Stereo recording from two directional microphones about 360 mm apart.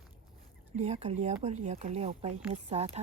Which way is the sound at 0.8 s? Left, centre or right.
Centre.